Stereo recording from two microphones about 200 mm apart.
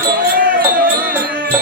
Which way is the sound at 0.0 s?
50° right (ahead or behind).